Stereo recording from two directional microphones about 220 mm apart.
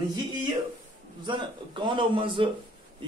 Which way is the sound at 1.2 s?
20° right (ahead or behind).